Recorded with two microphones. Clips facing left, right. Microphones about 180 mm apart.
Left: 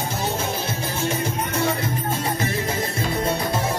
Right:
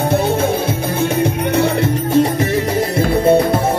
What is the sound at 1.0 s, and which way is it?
Music, 65° right (ahead or behind).